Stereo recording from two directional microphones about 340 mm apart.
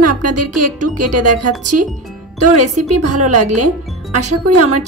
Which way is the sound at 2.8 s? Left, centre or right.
Right.